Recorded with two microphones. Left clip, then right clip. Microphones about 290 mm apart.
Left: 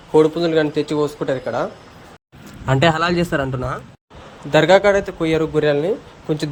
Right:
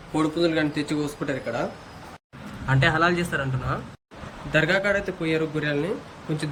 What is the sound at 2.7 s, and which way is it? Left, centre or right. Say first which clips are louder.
A man's voice: left 5 dB; left.